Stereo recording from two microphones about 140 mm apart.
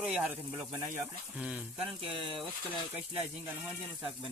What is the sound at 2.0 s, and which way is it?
Speech, 40° right (ahead or behind).